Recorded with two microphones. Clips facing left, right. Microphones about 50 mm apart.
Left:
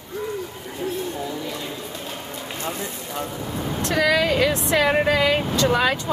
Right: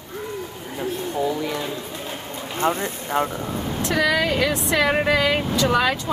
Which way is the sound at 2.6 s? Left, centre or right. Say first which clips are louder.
Right 9 dB; right.